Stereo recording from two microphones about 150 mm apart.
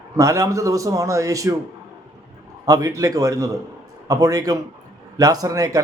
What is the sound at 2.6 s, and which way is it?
A man's voice, 25° right (ahead or behind).